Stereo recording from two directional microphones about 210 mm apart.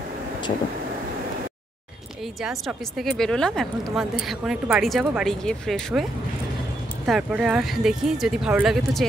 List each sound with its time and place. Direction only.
2.4 s speech: centre (ahead or behind)
7.1 s speech: 5° right (ahead or behind)